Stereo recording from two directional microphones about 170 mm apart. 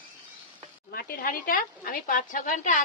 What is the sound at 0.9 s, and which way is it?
Speech, 60° left (ahead or behind).